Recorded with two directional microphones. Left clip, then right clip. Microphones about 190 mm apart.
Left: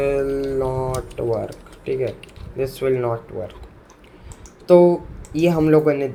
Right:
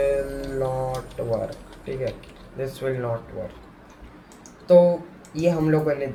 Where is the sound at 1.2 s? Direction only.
55° left (ahead or behind).